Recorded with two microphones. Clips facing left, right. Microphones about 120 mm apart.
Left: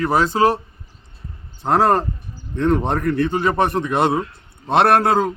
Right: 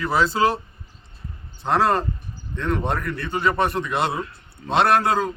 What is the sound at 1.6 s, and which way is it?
A man's voice, 40° left (ahead or behind).